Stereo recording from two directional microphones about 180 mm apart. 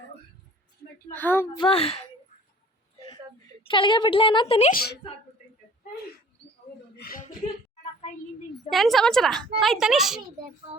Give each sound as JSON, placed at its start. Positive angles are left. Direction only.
{"t": 1.1, "sound": "a woman's voice", "side_deg": 10}
{"t": 1.5, "sound": "speech", "side_deg": 30}
{"t": 3.6, "sound": "a woman's voice", "side_deg": 30}
{"t": 4.7, "sound": "speech", "side_deg": 55}
{"t": 6.9, "sound": "a woman's voice", "side_deg": 55}
{"t": 8.7, "sound": "a woman's voice", "side_deg": 0}